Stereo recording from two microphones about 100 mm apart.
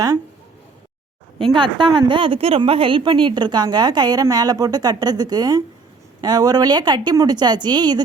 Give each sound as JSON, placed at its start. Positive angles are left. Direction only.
{"t": 1.5, "sound": "a woman's voice", "side_deg": -50}